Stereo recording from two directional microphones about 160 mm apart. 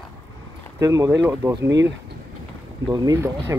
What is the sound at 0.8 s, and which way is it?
Speech, 20° right (ahead or behind).